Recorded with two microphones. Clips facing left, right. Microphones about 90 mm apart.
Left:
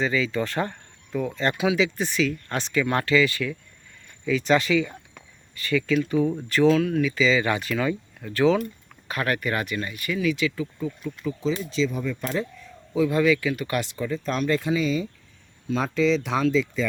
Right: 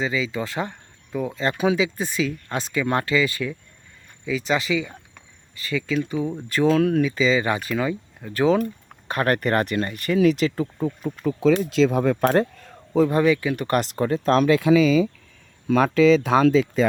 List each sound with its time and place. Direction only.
0.0 s speech: 15° right (ahead or behind)
1.5 s speech: 35° right (ahead or behind)
1.8 s speech: 20° right (ahead or behind)
4.3 s speech: 5° right (ahead or behind); by 6.7 s 25° right (ahead or behind)
6.7 s speech: 50° right (ahead or behind)
7.0 s speech: 30° right (ahead or behind)
9.0 s speech: 40° right (ahead or behind)
11.3 s speech: 60° right (ahead or behind)
11.9 s speech: 80° right; by 13.6 s 30° right (ahead or behind)
13.6 s speech: 45° right (ahead or behind)
13.9 s speech: 65° right (ahead or behind); by 15.1 s 90° right
15.6 s speech: 70° right (ahead or behind); by 16.8 s 50° right (ahead or behind)